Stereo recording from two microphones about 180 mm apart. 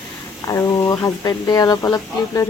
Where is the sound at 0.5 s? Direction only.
15° left (ahead or behind).